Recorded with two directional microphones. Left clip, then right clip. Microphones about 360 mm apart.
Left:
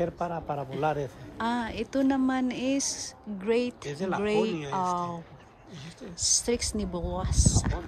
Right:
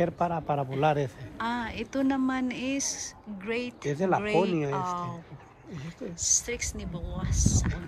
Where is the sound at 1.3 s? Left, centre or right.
Centre.